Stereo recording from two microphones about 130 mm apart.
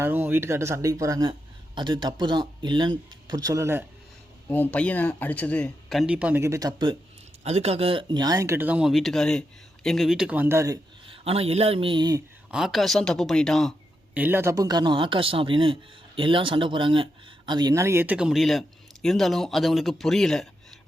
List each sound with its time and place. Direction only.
0.0 s speech: 15° right (ahead or behind)
4.4 s speech: 15° left (ahead or behind)
5.9 s speech: centre (ahead or behind)
6.1 s speech: 10° right (ahead or behind)
6.4 s speech: 25° right (ahead or behind)
7.4 s speech: 55° right (ahead or behind); by 10.8 s 20° right (ahead or behind)
11.0 s speech: 45° right (ahead or behind)
12.5 s speech: 5° right (ahead or behind)
14.1 s speech: 15° right (ahead or behind); by 20.5 s 5° left (ahead or behind)